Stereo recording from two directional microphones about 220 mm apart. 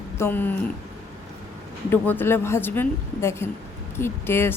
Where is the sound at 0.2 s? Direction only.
10° left (ahead or behind).